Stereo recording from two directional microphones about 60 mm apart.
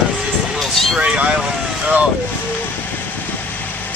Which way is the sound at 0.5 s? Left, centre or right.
Centre.